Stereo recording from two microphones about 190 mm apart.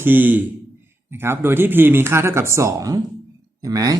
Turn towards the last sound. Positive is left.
turn(degrees=-20)  # may be behind; listen again after turning